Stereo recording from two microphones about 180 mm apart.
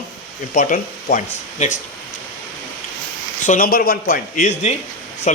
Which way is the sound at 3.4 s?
50° left (ahead or behind).